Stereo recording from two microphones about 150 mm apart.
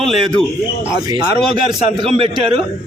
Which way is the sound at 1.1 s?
30° right (ahead or behind).